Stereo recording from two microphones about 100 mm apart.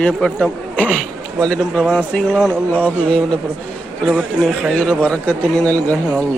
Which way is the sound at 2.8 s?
10° left (ahead or behind).